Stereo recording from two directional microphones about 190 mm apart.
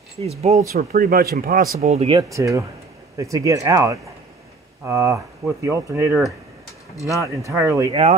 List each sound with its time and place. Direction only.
0.2 s speech: 35° right (ahead or behind)
0.7 s speech: 50° right (ahead or behind)
1.8 s speech: 35° right (ahead or behind)
2.3 s speech: 15° right (ahead or behind)
7.9 s speech: 35° right (ahead or behind)